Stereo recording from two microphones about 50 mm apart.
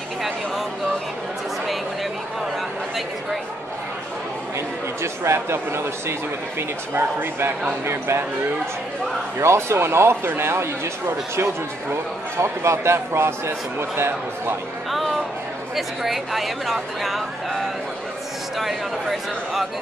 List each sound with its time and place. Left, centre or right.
4.6 s speech: right
6.9 s a man's voice: right
9.4 s a man's voice: right
14.9 s speech: centre